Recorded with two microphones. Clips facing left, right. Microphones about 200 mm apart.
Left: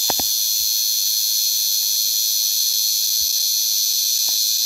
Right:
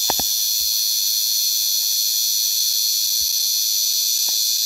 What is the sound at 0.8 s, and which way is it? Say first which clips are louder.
Fire alarm: left 1 dB; centre (ahead or behind).